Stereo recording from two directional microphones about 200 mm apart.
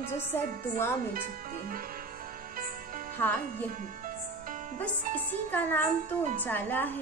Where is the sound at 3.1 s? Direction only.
10° left (ahead or behind).